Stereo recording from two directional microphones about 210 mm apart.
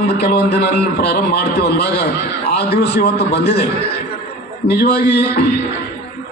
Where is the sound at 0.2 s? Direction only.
50° left (ahead or behind).